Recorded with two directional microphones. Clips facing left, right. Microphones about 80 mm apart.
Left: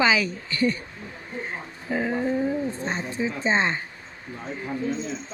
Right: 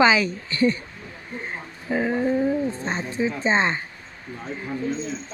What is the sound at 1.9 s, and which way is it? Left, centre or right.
Speech, right.